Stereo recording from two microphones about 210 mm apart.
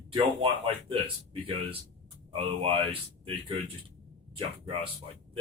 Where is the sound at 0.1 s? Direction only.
25° right (ahead or behind).